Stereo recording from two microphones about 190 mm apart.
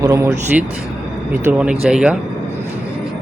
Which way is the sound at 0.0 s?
15° right (ahead or behind).